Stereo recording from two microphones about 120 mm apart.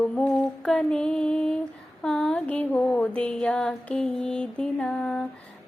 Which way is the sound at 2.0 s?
5° left (ahead or behind).